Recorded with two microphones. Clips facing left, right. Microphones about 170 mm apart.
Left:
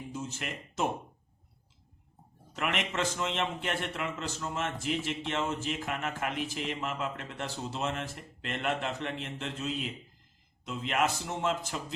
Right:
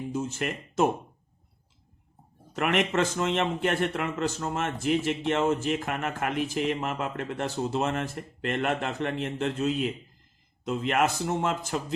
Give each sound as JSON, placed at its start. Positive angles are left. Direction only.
{"t": 0.1, "sound": "speech", "side_deg": -50}
{"t": 2.5, "sound": "a man's voice", "side_deg": -50}